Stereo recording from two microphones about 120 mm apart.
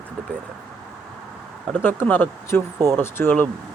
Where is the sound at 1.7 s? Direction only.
15° left (ahead or behind).